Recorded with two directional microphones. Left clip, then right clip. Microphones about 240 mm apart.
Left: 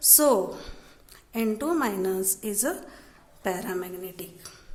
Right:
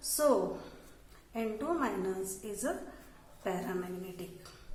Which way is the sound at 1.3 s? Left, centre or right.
Left.